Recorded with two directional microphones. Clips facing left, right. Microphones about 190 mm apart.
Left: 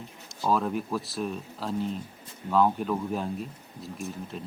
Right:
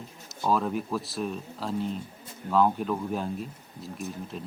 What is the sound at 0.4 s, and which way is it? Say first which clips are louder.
Speech: even; centre (ahead or behind).